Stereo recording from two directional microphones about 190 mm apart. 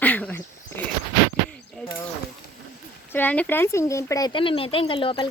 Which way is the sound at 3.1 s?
10° left (ahead or behind).